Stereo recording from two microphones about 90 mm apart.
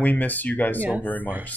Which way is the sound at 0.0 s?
20° left (ahead or behind).